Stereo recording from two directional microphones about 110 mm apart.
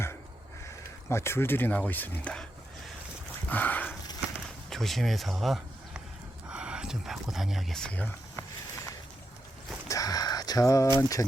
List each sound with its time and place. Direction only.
1.1 s speech: 25° left (ahead or behind); by 2.9 s 5° left (ahead or behind)
3.5 s dog: 15° left (ahead or behind)
4.4 s a sound: 5° left (ahead or behind)
6.5 s speech: 10° right (ahead or behind); by 8.1 s 10° left (ahead or behind)
8.4 s walk: 25° left (ahead or behind)
9.9 s a sound: 35° left (ahead or behind)
11.2 s speech: 25° left (ahead or behind)